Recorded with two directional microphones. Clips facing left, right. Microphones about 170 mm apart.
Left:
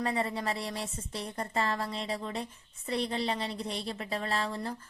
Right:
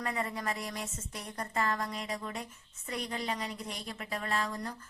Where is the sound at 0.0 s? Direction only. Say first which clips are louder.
Left 4 dB; 30° left (ahead or behind).